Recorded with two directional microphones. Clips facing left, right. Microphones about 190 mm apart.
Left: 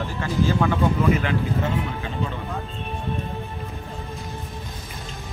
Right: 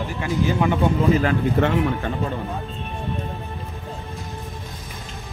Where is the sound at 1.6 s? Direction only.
70° right (ahead or behind).